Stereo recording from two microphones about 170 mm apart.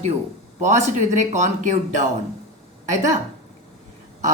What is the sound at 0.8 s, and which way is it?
Speech, 45° right (ahead or behind).